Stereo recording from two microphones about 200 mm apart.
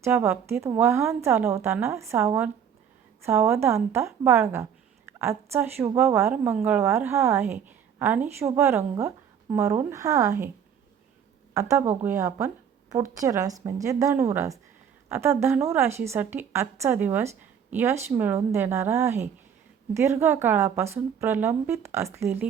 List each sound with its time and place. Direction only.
0.0 s a woman's voice: 10° right (ahead or behind)
11.5 s a woman's voice: 15° right (ahead or behind)